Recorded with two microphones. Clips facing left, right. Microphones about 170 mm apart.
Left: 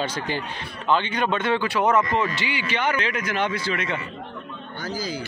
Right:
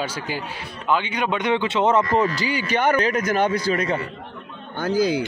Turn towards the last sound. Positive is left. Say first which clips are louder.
# right 9 dB
turn(degrees=-60)  # may be behind; listen again after turning